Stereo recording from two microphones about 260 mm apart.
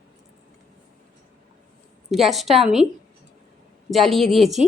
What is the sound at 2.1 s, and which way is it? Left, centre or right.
Speech, centre.